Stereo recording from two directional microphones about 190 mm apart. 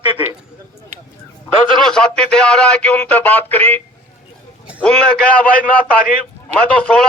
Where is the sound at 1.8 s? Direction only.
5° left (ahead or behind).